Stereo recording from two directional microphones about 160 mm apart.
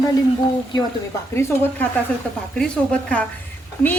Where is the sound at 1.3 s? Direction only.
15° left (ahead or behind).